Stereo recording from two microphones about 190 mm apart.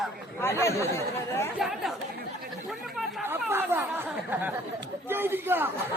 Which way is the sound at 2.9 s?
10° right (ahead or behind).